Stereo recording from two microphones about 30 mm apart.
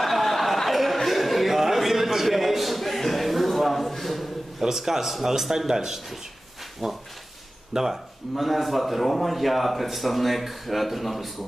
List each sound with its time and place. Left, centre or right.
0.0 s a sound: centre
4.6 s speech: centre
8.4 s a man's voice: centre